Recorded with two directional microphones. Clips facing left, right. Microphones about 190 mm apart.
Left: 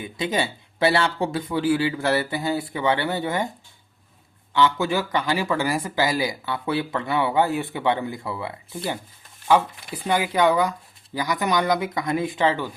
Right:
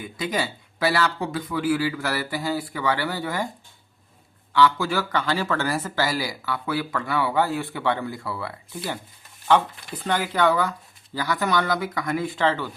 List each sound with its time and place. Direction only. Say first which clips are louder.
0.0 s speech: left 2 dB; 20° left (ahead or behind)
4.5 s speech: even; 20° left (ahead or behind)